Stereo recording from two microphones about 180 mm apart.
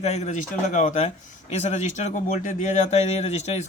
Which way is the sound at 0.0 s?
40° left (ahead or behind).